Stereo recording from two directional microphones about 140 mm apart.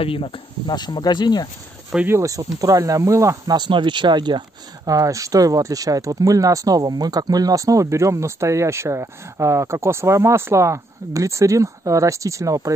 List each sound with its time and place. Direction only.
0.0 s speech: 40° left (ahead or behind)
2.0 s speech: 20° right (ahead or behind)